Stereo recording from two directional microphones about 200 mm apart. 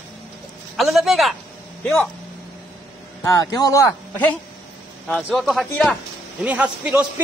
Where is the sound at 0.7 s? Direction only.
Centre (ahead or behind).